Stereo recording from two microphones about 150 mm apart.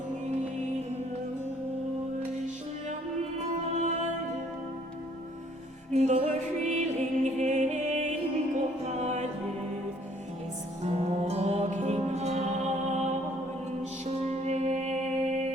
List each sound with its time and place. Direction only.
3.8 s music: 50° right (ahead or behind)
5.9 s music: 50° right (ahead or behind)
10.8 s music: 45° right (ahead or behind)